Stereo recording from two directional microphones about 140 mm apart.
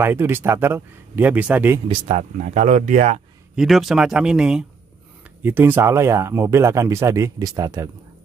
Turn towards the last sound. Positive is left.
turn(degrees=-25)  # may be behind; listen again after turning